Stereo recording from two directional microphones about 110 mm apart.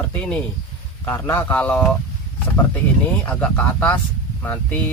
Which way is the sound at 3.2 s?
10° left (ahead or behind).